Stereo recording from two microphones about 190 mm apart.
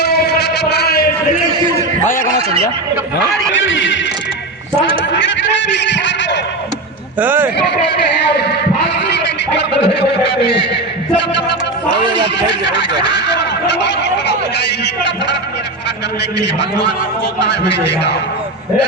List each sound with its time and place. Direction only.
0.0 s music: 60° left (ahead or behind)
3.5 s speech: 85° left
5.8 s a sound: 70° left (ahead or behind)
7.2 s speech: 10° right (ahead or behind)
7.9 s a man's voice: 60° left (ahead or behind)
9.6 s a sound: 60° left (ahead or behind)
11.2 s speech: 65° left (ahead or behind)
13.1 s speech: 65° left (ahead or behind)
17.4 s speech: 65° left (ahead or behind)